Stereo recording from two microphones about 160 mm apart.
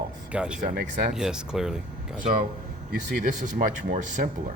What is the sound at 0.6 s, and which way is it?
Speech, 80° right.